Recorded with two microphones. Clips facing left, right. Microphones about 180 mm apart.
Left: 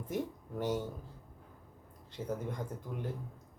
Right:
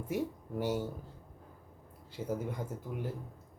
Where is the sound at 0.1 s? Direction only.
10° right (ahead or behind).